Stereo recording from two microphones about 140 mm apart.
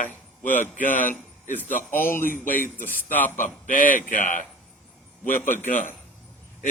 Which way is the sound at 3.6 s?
70° left (ahead or behind).